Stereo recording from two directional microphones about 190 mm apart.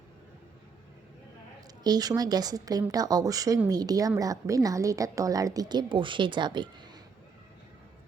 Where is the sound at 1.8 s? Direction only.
20° right (ahead or behind).